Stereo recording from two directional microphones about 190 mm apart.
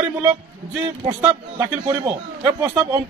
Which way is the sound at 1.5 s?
15° right (ahead or behind).